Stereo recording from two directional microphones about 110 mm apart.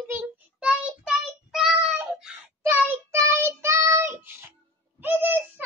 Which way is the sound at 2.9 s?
25° right (ahead or behind).